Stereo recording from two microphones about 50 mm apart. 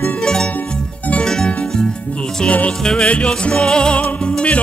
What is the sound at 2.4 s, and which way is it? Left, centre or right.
Music, left.